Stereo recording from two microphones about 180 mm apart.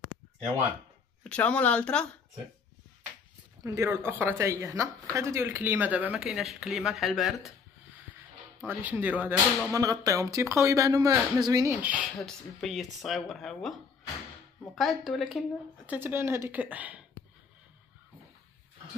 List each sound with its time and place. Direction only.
1.2 s speech: 5° left (ahead or behind)
3.6 s speech: 15° right (ahead or behind)
8.6 s speech: 10° right (ahead or behind)
11.8 s speech: 10° right (ahead or behind)
14.8 s speech: centre (ahead or behind)
15.9 s speech: 10° right (ahead or behind)